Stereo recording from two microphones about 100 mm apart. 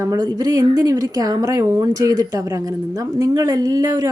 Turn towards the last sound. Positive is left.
turn(degrees=-35)  # may be behind; listen again after turning